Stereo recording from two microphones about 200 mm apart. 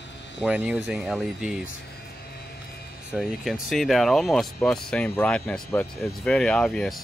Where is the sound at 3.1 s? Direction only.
5° right (ahead or behind).